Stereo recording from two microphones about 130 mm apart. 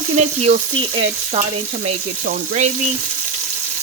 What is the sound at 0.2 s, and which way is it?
Speech, 55° right (ahead or behind).